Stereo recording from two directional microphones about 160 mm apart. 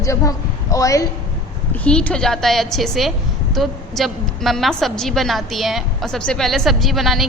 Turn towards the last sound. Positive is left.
turn(degrees=0)  # may be behind; listen again after turning